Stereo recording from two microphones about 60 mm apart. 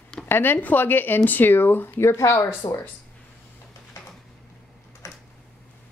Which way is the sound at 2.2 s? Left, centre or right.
Left.